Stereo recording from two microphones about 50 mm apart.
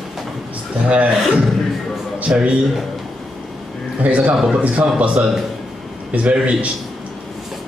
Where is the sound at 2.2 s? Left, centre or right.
Right.